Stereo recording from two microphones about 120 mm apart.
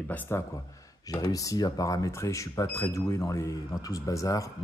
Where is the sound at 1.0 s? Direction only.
30° left (ahead or behind).